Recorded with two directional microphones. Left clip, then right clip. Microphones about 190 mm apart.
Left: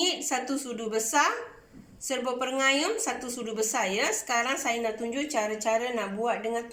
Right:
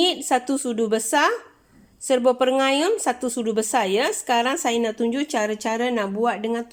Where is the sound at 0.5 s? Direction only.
50° right (ahead or behind).